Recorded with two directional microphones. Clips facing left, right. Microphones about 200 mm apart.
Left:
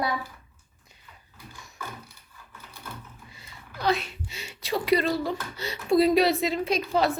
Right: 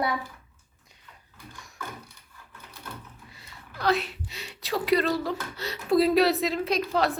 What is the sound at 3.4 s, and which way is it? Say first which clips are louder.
A woman's voice: left 1 dB; centre (ahead or behind).